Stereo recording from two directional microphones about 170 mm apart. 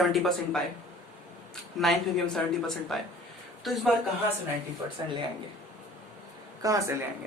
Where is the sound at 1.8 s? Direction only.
Centre (ahead or behind).